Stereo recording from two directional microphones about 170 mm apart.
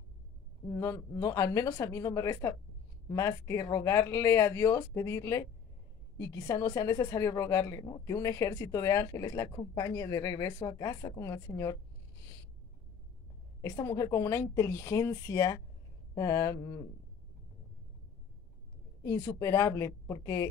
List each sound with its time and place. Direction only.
0.7 s a woman's voice: 20° left (ahead or behind)
13.6 s a woman's voice: 20° left (ahead or behind)
19.0 s speech: 20° left (ahead or behind)